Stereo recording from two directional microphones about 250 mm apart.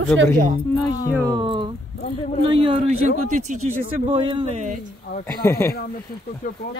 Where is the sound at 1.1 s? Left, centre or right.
Centre.